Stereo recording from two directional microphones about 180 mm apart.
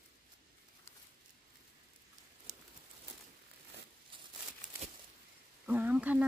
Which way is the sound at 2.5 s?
40° right (ahead or behind).